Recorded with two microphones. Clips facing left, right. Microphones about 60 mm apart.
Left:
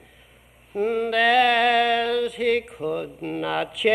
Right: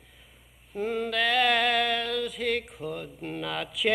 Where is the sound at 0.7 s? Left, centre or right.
Centre.